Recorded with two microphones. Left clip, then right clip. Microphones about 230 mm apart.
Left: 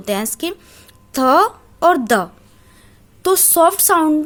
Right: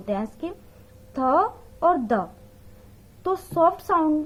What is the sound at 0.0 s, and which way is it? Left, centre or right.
A woman's voice, left.